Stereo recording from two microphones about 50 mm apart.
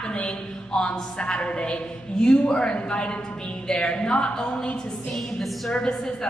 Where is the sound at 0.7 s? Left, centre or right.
Left.